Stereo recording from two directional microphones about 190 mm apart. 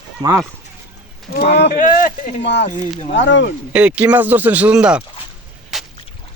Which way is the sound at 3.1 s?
75° left (ahead or behind).